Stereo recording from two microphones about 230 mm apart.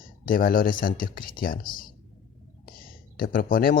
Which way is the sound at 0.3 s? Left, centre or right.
Left.